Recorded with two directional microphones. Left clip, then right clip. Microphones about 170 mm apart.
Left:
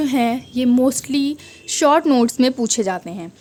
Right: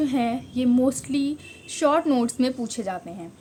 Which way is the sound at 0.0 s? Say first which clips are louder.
Left 5 dB; 50° left (ahead or behind).